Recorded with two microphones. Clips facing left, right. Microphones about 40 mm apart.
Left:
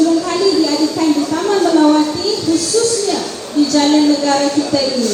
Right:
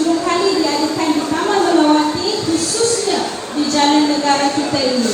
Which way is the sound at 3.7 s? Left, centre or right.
Right.